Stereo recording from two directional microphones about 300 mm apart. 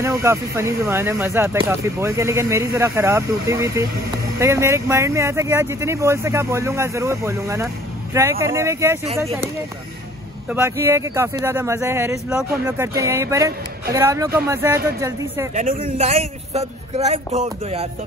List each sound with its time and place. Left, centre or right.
0.0 s speech: centre
10.5 s speech: centre
15.5 s speech: right